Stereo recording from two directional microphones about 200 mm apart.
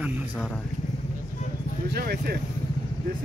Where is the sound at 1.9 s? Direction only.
50° right (ahead or behind).